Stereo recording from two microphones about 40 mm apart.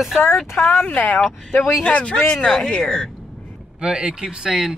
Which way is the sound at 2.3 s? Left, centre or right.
Centre.